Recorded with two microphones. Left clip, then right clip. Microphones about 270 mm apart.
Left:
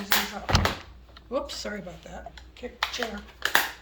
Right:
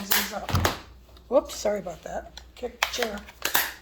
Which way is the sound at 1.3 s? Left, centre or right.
Centre.